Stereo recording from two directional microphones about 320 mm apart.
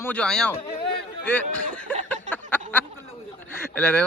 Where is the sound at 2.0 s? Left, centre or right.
Centre.